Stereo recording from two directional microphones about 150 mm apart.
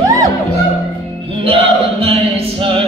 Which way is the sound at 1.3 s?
40° right (ahead or behind).